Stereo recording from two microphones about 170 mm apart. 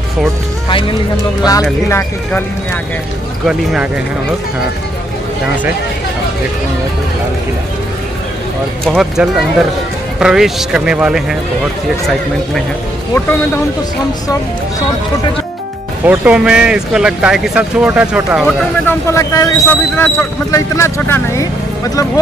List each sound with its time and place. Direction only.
0.7 s speech: 30° left (ahead or behind)
1.9 s speech: 15° left (ahead or behind)
3.4 s speech: centre (ahead or behind)
8.8 s speech: centre (ahead or behind)
16.1 s speech: 5° right (ahead or behind)
18.9 s speech: 15° left (ahead or behind)